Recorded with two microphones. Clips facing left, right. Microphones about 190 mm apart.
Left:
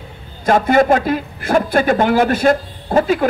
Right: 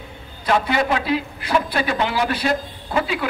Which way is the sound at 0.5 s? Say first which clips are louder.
Left 7 dB; 45° left (ahead or behind).